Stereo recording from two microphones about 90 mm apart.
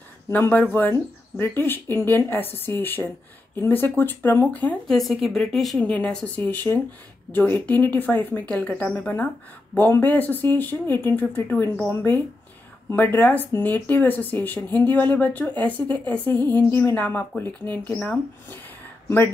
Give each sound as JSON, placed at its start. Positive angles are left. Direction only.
{"t": 0.3, "sound": "speech", "side_deg": 20}
{"t": 4.8, "sound": "a woman's voice", "side_deg": 5}
{"t": 5.8, "sound": "speech", "side_deg": 15}